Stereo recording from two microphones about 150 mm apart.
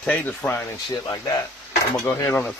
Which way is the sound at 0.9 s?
30° left (ahead or behind).